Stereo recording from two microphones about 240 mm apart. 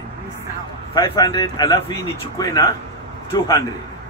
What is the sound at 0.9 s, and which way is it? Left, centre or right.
A man's voice, centre.